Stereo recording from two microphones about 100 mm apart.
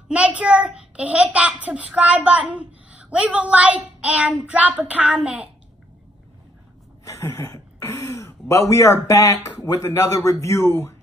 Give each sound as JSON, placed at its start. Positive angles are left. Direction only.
{"t": 0.1, "sound": "a child's voice", "side_deg": -10}
{"t": 7.1, "sound": "speech", "side_deg": 30}